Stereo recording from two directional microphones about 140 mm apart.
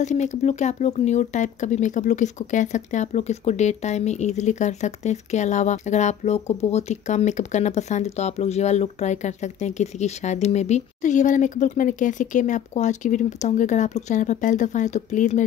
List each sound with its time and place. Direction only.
0.0 s speech: 55° left (ahead or behind)